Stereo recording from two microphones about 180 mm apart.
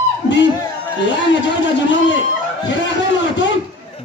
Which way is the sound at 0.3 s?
80° left.